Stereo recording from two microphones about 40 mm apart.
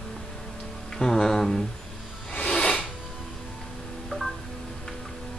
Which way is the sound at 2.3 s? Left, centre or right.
Left.